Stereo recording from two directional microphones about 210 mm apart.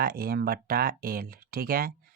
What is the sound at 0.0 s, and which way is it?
Speech, 45° right (ahead or behind).